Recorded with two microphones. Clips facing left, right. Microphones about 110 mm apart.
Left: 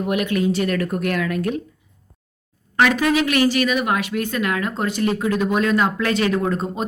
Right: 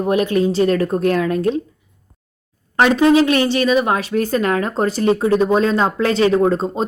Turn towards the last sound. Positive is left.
turn(degrees=-30)  # may be behind; listen again after turning